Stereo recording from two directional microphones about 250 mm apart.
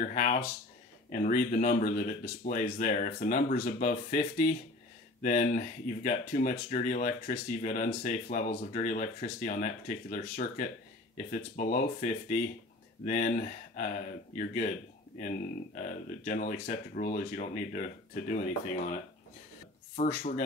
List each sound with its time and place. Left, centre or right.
0.0 s speech: left
20.0 s speech: left